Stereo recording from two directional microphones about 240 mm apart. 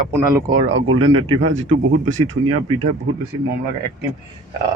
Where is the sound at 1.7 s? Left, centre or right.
Right.